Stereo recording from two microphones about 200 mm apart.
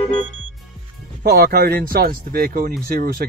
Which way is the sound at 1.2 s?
50° right (ahead or behind).